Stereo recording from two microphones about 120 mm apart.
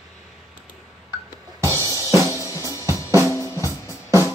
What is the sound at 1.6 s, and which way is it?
Drum kit, 25° right (ahead or behind).